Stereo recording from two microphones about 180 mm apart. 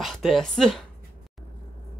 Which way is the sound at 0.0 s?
Centre (ahead or behind).